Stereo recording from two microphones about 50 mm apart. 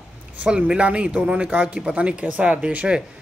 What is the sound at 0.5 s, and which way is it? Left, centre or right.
Speech, centre.